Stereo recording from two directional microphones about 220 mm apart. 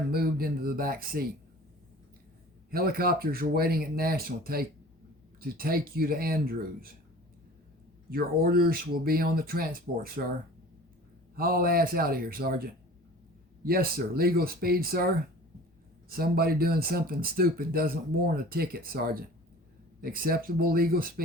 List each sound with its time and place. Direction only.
0.1 s speech: 45° right (ahead or behind)
2.6 s speech: 45° right (ahead or behind)
8.1 s speech: 45° right (ahead or behind)
11.3 s speech: 40° right (ahead or behind)